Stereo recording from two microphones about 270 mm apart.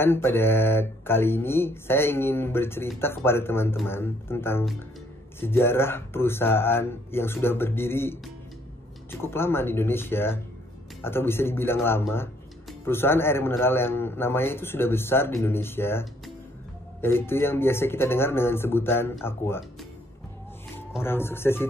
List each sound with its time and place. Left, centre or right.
0.0 s a man's voice: centre
21.0 s a man's voice: centre